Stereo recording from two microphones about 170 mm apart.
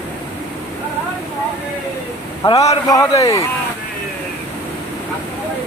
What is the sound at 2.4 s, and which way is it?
Speech, 20° left (ahead or behind).